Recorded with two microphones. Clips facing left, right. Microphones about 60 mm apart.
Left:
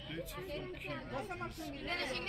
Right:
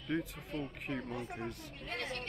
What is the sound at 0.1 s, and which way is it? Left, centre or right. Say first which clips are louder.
Speech: right 9 dB; right.